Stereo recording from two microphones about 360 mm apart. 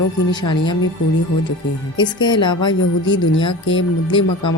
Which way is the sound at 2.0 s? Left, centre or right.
Centre.